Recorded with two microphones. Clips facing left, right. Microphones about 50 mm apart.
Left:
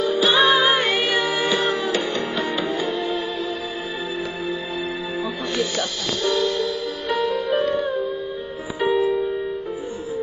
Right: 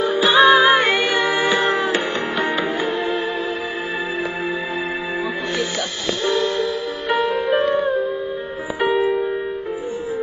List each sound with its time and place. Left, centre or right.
0.0 s music: right
0.3 s music: centre
1.2 s music: right
5.8 s music: right